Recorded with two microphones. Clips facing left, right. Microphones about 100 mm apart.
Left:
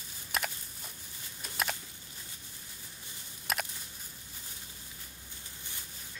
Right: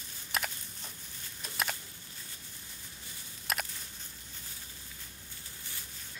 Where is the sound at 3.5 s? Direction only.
Centre (ahead or behind).